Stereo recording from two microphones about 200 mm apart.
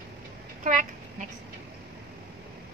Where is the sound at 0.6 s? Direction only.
40° right (ahead or behind).